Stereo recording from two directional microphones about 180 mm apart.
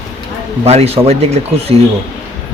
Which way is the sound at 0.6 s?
35° right (ahead or behind).